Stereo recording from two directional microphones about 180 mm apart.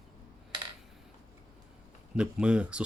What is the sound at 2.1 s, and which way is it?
Speech, 5° right (ahead or behind).